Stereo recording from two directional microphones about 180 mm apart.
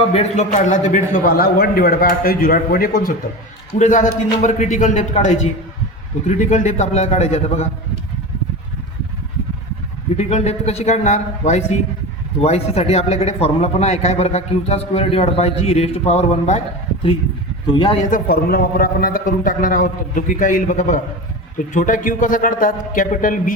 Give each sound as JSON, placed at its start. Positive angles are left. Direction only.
{"t": 0.1, "sound": "a man's voice", "side_deg": 35}
{"t": 3.7, "sound": "a man's voice", "side_deg": 45}
{"t": 10.2, "sound": "speech", "side_deg": 35}
{"t": 17.7, "sound": "speech", "side_deg": 25}
{"t": 18.1, "sound": "a man's voice", "side_deg": 55}